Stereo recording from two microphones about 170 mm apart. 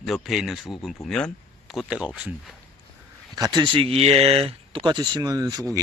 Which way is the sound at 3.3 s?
25° right (ahead or behind).